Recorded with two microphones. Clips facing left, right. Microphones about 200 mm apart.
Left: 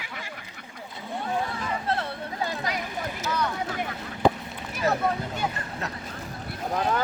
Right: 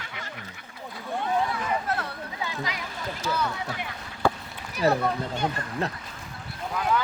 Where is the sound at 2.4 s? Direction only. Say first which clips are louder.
Left 3 dB; 50° left (ahead or behind).